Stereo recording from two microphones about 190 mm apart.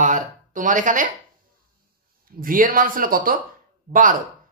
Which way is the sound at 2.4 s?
45° right (ahead or behind).